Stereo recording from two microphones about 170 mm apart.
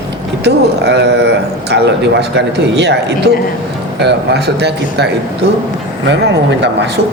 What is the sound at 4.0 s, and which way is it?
A man's voice, 80° right.